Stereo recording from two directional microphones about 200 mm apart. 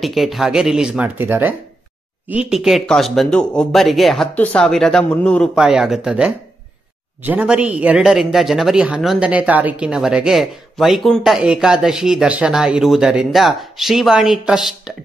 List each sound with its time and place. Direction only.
0.0 s a man's voice: centre (ahead or behind)